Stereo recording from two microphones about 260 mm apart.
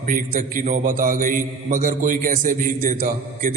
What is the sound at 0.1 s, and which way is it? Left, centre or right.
A man's voice, right.